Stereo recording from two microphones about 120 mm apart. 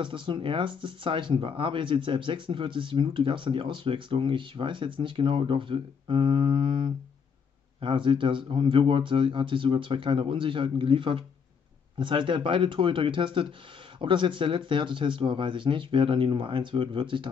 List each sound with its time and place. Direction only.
0.0 s speech: 45° right (ahead or behind)